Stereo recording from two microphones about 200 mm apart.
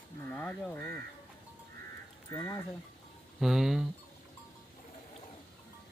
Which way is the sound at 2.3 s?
15° left (ahead or behind).